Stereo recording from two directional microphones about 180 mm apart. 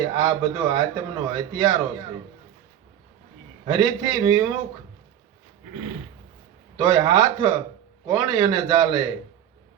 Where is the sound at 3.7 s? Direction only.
20° right (ahead or behind).